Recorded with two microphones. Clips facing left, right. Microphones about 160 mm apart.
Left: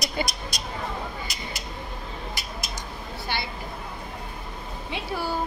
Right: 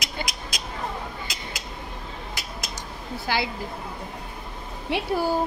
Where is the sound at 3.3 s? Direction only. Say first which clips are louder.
Right 6 dB; 90° right.